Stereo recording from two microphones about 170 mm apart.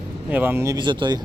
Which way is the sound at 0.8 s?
25° right (ahead or behind).